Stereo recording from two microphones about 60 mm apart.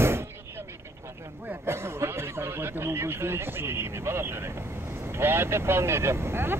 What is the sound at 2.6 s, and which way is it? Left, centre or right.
Vehicle, right.